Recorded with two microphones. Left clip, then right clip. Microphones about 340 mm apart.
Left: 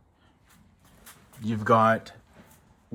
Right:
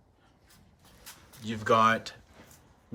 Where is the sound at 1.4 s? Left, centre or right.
Centre.